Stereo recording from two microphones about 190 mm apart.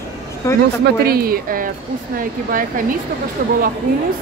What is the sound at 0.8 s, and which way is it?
Speech, 55° right (ahead or behind).